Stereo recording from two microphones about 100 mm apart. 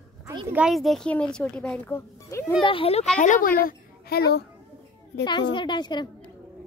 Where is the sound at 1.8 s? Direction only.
25° left (ahead or behind).